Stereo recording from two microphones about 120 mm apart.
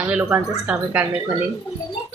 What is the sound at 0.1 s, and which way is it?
Speech, 10° right (ahead or behind).